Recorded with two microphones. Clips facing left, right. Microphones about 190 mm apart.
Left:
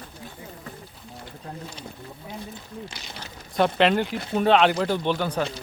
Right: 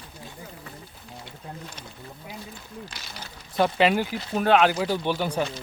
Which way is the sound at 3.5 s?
5° right (ahead or behind).